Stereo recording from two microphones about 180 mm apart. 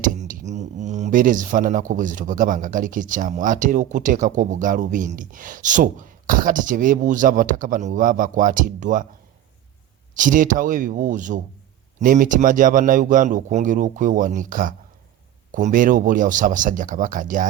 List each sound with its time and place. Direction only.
0.0 s speech: 45° right (ahead or behind)
10.2 s speech: 45° right (ahead or behind)